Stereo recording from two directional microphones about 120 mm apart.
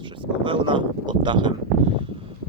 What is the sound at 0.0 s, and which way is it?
Speech, 45° right (ahead or behind).